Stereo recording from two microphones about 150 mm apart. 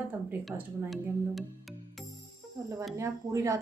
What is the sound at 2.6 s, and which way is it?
Speech, 20° right (ahead or behind).